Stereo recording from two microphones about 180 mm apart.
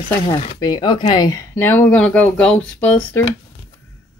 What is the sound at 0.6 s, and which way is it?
Speech, 25° left (ahead or behind).